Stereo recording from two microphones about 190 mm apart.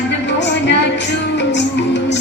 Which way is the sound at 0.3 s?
70° left (ahead or behind).